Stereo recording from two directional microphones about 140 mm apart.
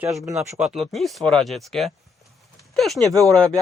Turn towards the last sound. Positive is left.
turn(degrees=5)  # may be behind; listen again after turning